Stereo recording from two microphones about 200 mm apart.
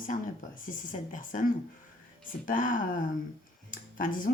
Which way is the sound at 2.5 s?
40° left (ahead or behind).